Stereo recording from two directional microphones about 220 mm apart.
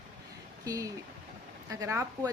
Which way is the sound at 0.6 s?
15° right (ahead or behind).